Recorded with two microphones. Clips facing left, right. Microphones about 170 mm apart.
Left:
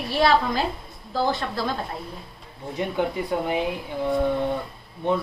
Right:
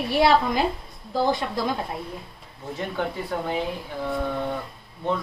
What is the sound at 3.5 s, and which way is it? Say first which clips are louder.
Speech: left 2 dB; 15° left (ahead or behind).